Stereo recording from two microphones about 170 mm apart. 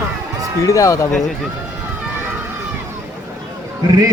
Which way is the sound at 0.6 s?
20° left (ahead or behind).